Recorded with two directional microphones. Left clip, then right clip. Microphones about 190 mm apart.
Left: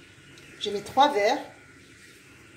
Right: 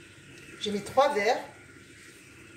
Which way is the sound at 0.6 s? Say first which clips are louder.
Left 3 dB; 35° left (ahead or behind).